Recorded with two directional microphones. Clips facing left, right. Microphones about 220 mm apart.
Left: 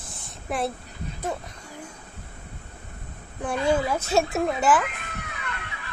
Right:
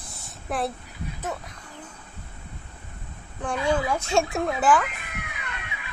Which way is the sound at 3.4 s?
5° left (ahead or behind).